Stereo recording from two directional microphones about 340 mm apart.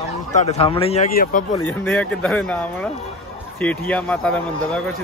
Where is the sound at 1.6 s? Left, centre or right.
Centre.